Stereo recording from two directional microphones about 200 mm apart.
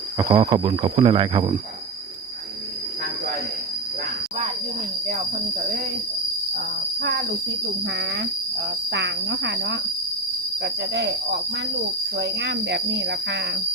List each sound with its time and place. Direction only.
0.2 s speech: 15° right (ahead or behind)
7.9 s cricket: 60° right (ahead or behind)